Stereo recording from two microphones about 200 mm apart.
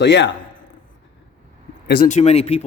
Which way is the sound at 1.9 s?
45° left (ahead or behind).